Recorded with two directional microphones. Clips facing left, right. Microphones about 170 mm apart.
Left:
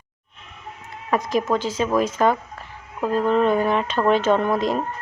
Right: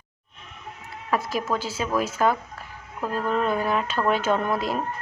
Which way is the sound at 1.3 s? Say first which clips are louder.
Left 5 dB; 45° left (ahead or behind).